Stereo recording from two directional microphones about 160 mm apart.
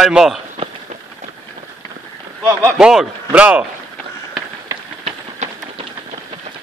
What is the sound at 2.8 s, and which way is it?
Speech, centre (ahead or behind).